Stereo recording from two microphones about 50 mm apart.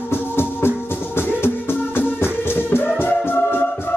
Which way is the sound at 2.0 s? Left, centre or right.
Left.